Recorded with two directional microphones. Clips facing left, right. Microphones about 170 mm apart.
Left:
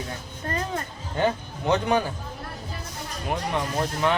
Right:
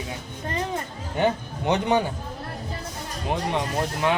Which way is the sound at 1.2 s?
20° right (ahead or behind).